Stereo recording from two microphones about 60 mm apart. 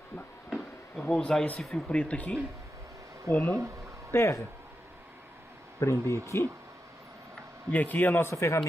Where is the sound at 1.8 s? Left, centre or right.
Centre.